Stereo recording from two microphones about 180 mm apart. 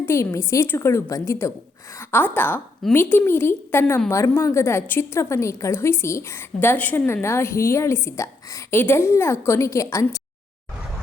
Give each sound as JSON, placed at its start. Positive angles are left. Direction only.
{"t": 0.0, "sound": "a woman's voice", "side_deg": 15}